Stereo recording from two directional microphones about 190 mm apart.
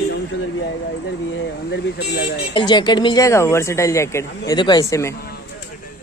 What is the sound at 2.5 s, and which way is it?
Speech, 25° left (ahead or behind).